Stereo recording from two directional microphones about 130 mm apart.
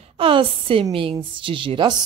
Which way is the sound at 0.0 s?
45° right (ahead or behind).